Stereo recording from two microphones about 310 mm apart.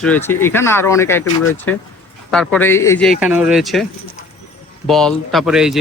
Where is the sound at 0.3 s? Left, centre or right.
Centre.